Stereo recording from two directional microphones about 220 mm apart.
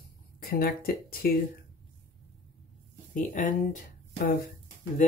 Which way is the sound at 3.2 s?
35° left (ahead or behind).